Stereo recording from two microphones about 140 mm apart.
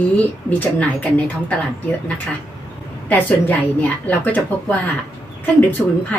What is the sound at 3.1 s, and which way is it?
Speech, 10° left (ahead or behind).